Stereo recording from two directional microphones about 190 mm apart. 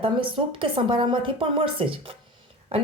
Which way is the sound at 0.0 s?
25° right (ahead or behind).